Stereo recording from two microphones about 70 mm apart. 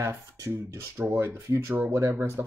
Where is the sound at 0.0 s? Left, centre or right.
Right.